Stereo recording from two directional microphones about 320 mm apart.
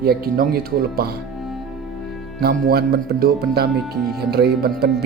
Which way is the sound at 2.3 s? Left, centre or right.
Right.